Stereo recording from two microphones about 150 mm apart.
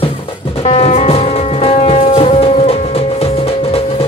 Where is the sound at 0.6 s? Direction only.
45° left (ahead or behind).